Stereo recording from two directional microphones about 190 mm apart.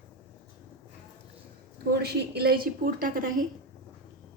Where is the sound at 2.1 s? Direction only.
55° right (ahead or behind).